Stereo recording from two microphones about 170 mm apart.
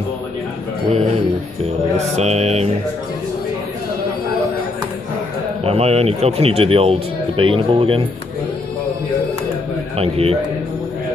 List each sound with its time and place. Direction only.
2.1 s speech: 40° right (ahead or behind)
5.6 s speech: 35° right (ahead or behind)
9.9 s speech: 35° right (ahead or behind)